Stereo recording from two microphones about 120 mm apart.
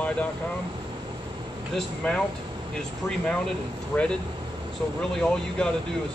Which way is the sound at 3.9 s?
20° left (ahead or behind).